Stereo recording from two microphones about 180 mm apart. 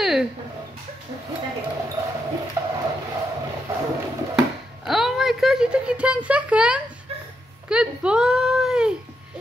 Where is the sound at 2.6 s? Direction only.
15° right (ahead or behind).